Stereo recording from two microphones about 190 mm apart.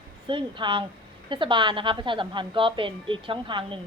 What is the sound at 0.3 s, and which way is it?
A woman's voice, 25° right (ahead or behind).